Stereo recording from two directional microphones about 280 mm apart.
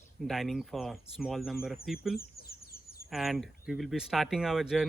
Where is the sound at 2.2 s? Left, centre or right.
Left.